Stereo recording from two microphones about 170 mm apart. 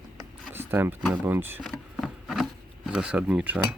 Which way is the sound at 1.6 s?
Centre (ahead or behind).